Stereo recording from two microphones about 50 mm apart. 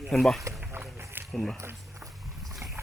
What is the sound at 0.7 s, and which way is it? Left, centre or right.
Run, right.